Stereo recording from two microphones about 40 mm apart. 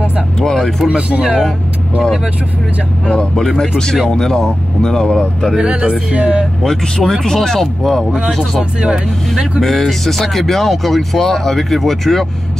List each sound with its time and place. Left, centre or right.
0.4 s speech: centre
0.8 s music: right
3.3 s speech: centre
5.6 s music: right
6.6 s speech: centre
9.6 s speech: centre